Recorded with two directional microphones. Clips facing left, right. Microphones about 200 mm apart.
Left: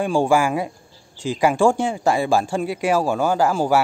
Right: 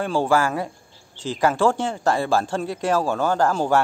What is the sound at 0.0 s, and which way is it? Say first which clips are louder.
Speech: left 2 dB; 15° left (ahead or behind).